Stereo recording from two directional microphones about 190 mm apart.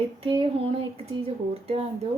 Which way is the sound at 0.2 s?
30° right (ahead or behind).